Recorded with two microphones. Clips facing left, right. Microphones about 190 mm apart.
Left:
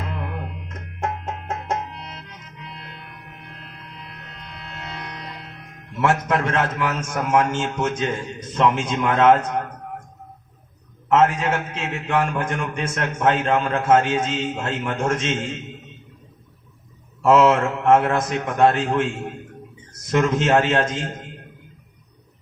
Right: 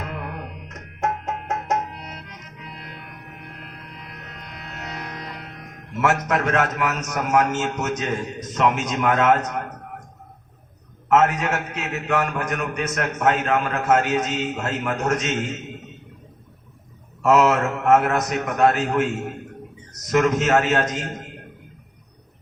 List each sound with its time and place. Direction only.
0.3 s music: 30° left (ahead or behind)
4.3 s music: 30° left (ahead or behind)
6.0 s a man's voice: 30° left (ahead or behind)
11.1 s a man's voice: 30° left (ahead or behind)
17.2 s a man's voice: 30° left (ahead or behind)